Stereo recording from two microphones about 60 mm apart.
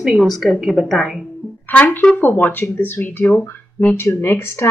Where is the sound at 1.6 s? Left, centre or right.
Left.